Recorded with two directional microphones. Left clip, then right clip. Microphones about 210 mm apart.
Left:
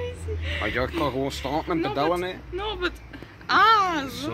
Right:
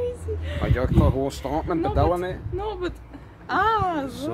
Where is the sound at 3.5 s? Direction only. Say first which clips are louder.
Left 3 dB; 35° right (ahead or behind).